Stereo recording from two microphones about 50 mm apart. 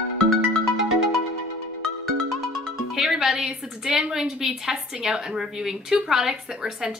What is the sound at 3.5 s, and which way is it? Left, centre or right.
A woman's voice, centre.